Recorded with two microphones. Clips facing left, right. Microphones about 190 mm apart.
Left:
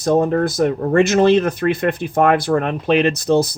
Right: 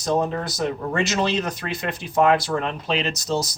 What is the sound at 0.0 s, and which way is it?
Speech, 55° left (ahead or behind).